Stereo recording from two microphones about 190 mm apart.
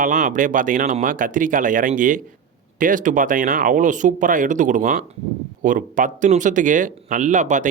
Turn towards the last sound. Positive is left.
turn(degrees=-40)  # may be behind; listen again after turning